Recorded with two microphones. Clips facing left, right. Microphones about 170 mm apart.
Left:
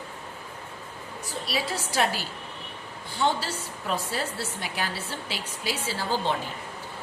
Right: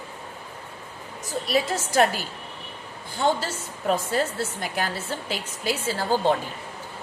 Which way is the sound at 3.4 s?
45° right (ahead or behind).